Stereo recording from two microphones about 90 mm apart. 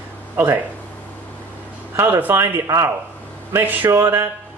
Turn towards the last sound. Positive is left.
turn(degrees=-30)  # may be behind; listen again after turning